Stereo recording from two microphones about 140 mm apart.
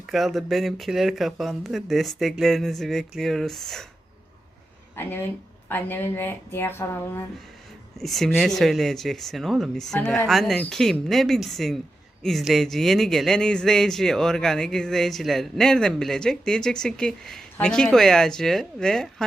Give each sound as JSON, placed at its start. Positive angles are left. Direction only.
{"t": 0.1, "sound": "speech", "side_deg": 0}
{"t": 4.9, "sound": "speech", "side_deg": 15}
{"t": 7.9, "sound": "speech", "side_deg": 0}